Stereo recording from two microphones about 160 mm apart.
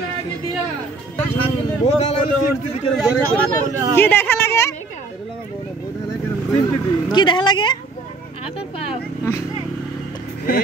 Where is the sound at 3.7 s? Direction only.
20° right (ahead or behind).